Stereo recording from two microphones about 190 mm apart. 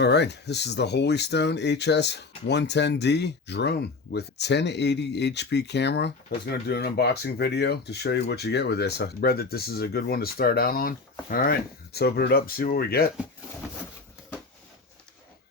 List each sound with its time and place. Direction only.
0.0 s speech: 60° left (ahead or behind)